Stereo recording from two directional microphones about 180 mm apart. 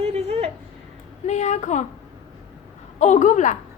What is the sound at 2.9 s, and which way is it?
Speech, 40° left (ahead or behind).